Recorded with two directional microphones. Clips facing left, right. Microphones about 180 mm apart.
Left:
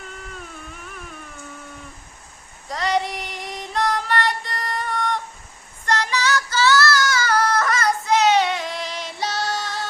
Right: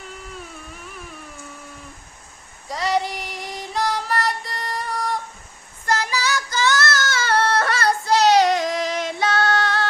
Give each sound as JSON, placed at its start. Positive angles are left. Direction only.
{"t": 2.6, "sound": "female singing", "side_deg": 0}
{"t": 5.8, "sound": "child singing", "side_deg": -10}